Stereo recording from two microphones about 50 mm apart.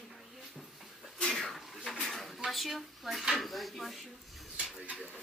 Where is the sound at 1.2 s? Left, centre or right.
Centre.